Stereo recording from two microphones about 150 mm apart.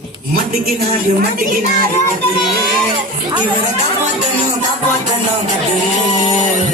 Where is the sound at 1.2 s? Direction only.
70° right (ahead or behind).